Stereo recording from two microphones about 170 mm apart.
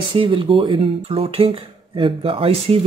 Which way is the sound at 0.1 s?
30° right (ahead or behind).